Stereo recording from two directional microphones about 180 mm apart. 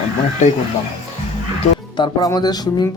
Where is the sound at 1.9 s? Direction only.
20° left (ahead or behind).